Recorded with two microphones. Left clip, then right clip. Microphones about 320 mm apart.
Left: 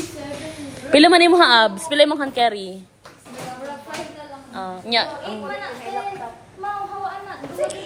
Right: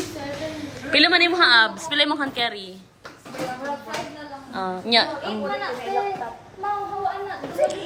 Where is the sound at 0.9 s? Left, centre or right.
Centre.